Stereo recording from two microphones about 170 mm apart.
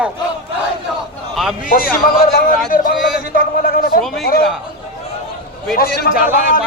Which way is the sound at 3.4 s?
55° left (ahead or behind).